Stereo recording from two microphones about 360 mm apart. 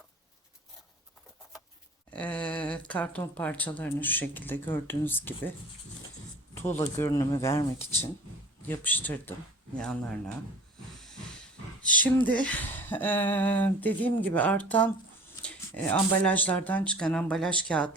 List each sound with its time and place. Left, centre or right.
2.1 s speech: centre
6.6 s speech: centre
12.0 s speech: centre